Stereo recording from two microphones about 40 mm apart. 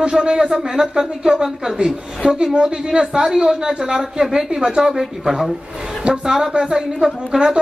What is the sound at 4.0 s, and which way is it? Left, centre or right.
Speech, centre.